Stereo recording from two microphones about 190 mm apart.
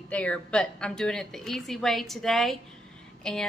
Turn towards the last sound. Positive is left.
turn(degrees=5)  # may be behind; listen again after turning